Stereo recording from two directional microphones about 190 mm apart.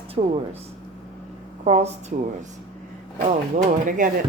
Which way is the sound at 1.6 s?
35° right (ahead or behind).